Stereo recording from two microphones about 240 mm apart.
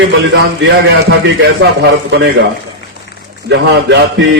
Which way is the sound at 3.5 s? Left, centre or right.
Right.